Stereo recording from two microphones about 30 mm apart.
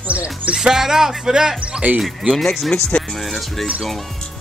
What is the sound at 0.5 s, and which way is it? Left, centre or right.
Speech, right.